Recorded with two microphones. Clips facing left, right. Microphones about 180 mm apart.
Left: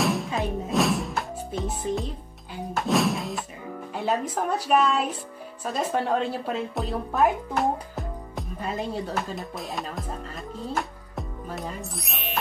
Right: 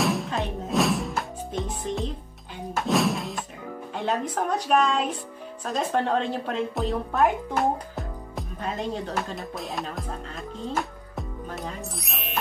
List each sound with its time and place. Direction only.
0.0 s music: centre (ahead or behind)
2.7 s thunk: centre (ahead or behind)
3.9 s speech: 5° left (ahead or behind)
10.7 s music: centre (ahead or behind)